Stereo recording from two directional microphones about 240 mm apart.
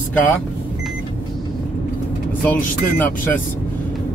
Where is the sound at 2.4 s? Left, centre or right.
Centre.